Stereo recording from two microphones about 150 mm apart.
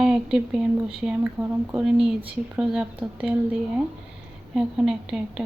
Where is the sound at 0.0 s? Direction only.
5° right (ahead or behind).